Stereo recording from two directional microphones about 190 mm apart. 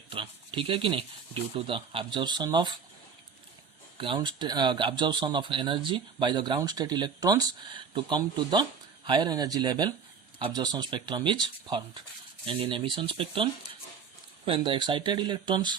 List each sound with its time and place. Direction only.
0.1 s speech: 25° right (ahead or behind)
3.9 s speech: 25° right (ahead or behind)